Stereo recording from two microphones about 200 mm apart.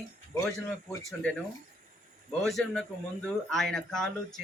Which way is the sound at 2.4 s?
5° left (ahead or behind).